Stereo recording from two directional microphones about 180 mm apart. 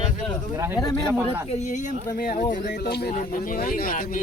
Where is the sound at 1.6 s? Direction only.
45° left (ahead or behind).